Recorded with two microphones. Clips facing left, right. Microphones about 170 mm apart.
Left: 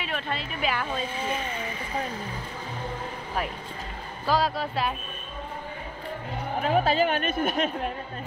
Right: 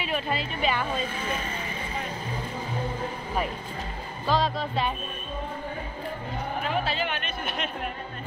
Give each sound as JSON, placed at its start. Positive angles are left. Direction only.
{"t": 0.0, "sound": "speech", "side_deg": 0}
{"t": 4.3, "sound": "speech", "side_deg": 5}
{"t": 6.8, "sound": "speech", "side_deg": 45}